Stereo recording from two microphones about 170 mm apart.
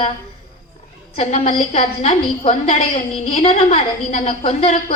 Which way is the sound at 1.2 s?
40° left (ahead or behind).